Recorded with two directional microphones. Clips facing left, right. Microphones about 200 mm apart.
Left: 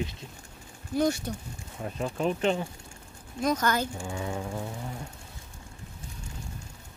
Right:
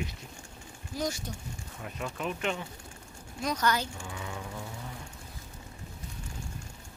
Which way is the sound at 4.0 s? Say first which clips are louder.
Left 7 dB; 30° left (ahead or behind).